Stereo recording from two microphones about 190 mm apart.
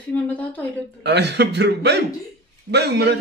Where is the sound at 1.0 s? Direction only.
60° right (ahead or behind).